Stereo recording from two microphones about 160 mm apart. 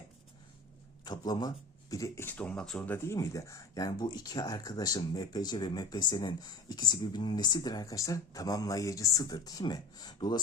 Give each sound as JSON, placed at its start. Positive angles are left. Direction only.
{"t": 1.0, "sound": "speech", "side_deg": 25}